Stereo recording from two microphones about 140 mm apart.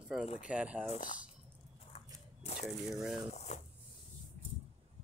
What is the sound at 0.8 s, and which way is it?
Speech, 50° left (ahead or behind).